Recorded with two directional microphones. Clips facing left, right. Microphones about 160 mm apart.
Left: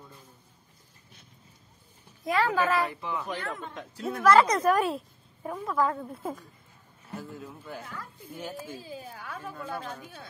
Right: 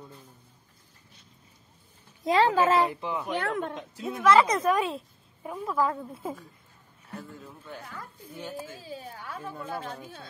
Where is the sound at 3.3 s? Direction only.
65° right (ahead or behind).